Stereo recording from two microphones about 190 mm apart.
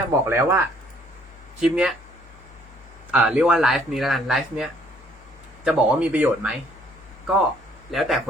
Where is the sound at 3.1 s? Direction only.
5° right (ahead or behind).